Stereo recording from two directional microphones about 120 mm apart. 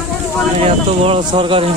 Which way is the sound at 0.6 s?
55° right (ahead or behind).